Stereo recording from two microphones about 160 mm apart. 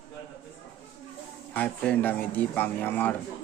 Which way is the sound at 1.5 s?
10° left (ahead or behind).